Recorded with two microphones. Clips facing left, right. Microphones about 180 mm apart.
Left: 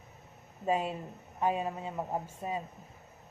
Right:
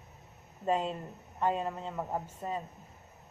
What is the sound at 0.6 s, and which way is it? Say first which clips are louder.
A woman's voice: even; 10° left (ahead or behind).